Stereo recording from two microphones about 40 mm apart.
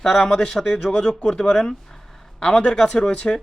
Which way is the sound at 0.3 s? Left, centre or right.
Centre.